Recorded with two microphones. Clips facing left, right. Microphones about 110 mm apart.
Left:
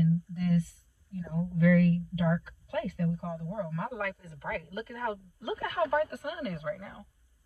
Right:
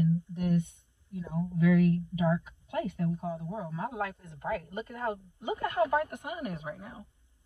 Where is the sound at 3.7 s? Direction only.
20° right (ahead or behind).